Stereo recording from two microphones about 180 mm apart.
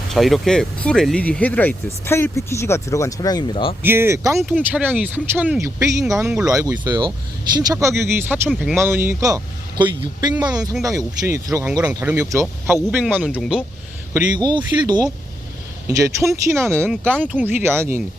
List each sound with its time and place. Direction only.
0.1 s speech: centre (ahead or behind); by 3.8 s 30° left (ahead or behind)
3.8 s speech: 15° right (ahead or behind)
8.4 s speech: centre (ahead or behind)
8.7 s speech: 15° right (ahead or behind)
14.3 s speech: 25° right (ahead or behind)
16.9 s speech: 5° left (ahead or behind)
17.2 s speech: 10° right (ahead or behind)